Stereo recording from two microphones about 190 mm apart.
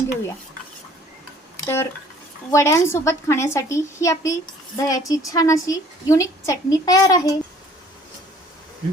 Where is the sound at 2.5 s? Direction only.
15° left (ahead or behind).